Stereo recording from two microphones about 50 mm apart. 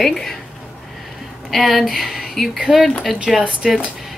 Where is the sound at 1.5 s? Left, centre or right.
Centre.